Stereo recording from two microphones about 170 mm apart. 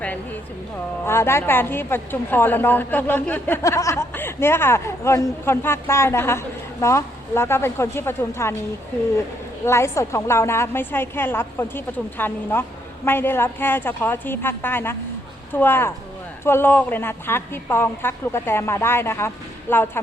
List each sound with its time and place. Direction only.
1.0 s a woman's voice: 15° left (ahead or behind)
9.6 s a woman's voice: 15° left (ahead or behind)